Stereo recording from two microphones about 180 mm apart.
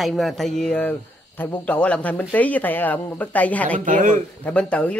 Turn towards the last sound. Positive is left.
turn(degrees=5)  # may be behind; listen again after turning